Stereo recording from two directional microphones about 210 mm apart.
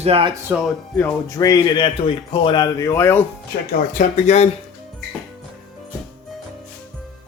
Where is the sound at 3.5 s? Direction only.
50° left (ahead or behind).